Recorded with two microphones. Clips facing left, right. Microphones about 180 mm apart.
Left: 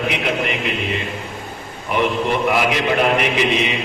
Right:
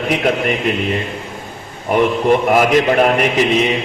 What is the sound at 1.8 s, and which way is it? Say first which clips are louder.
A man's voice: right 6 dB; 45° right (ahead or behind).